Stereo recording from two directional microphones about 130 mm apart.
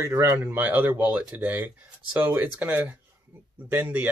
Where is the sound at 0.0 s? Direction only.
20° right (ahead or behind).